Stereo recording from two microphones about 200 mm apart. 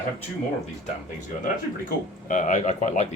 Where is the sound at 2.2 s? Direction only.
40° left (ahead or behind).